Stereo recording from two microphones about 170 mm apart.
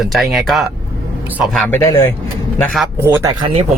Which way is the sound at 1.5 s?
10° left (ahead or behind).